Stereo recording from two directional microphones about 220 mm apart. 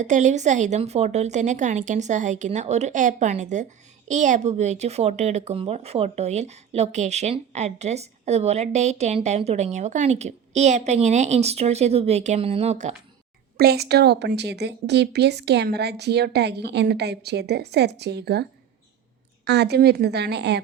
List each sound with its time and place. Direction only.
0.0 s speech: 35° right (ahead or behind)
13.6 s a woman's voice: 45° right (ahead or behind)
19.5 s a woman's voice: 50° right (ahead or behind)